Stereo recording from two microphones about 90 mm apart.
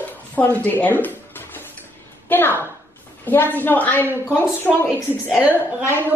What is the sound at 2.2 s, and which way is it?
Speech, 20° left (ahead or behind).